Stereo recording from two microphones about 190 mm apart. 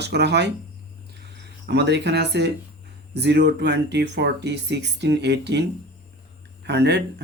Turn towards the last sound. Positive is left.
turn(degrees=-60)  # may be behind; listen again after turning